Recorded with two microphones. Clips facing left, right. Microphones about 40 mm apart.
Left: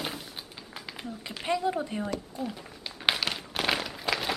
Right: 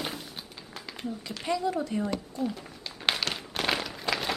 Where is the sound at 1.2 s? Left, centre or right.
Left.